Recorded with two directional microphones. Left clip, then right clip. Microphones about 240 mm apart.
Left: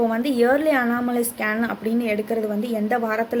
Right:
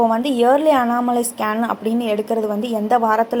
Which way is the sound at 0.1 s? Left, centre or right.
Centre.